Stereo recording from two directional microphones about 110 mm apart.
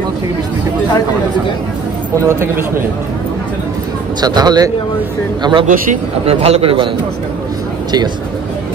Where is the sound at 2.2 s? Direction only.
20° right (ahead or behind).